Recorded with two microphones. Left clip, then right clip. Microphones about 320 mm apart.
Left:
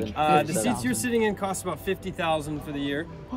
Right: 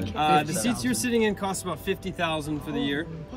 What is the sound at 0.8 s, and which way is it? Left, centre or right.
A man's voice, centre.